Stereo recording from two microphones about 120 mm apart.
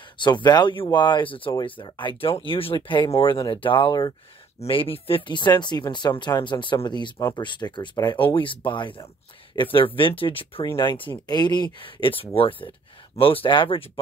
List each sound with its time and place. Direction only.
0.2 s speech: 40° left (ahead or behind)